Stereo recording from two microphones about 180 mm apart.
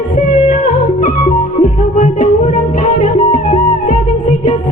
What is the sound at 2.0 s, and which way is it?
Music, 45° left (ahead or behind).